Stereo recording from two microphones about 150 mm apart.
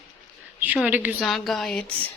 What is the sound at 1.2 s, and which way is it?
Speech, centre (ahead or behind).